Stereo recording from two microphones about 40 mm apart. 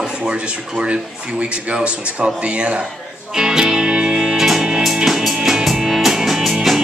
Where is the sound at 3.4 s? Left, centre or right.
Centre.